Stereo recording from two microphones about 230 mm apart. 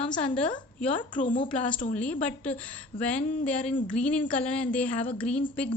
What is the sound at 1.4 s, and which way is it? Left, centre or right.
A woman's voice, centre.